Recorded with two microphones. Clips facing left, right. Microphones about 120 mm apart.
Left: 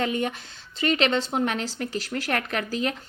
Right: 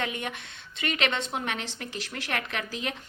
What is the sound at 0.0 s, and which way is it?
Speech, 35° left (ahead or behind).